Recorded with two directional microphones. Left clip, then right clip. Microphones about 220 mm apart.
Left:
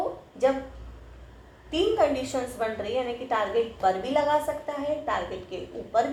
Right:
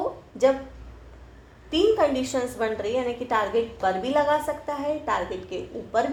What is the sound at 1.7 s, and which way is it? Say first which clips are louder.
A woman's voice: right 3 dB; 40° right (ahead or behind).